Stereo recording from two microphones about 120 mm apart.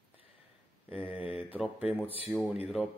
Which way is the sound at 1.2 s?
50° left (ahead or behind).